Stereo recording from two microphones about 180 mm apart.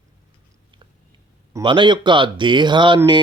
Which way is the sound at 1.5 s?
25° right (ahead or behind).